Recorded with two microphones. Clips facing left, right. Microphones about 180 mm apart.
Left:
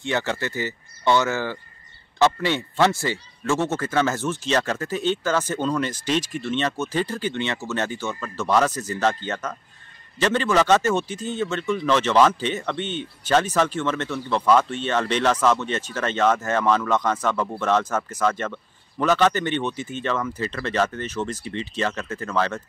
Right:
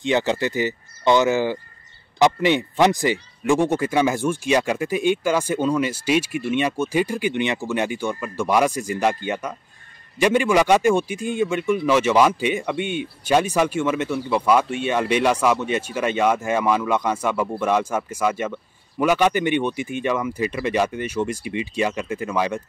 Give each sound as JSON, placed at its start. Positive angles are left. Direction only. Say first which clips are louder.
{"t": 0.0, "sound": "a man's voice", "louder": "right 5 dB", "side_deg": -15}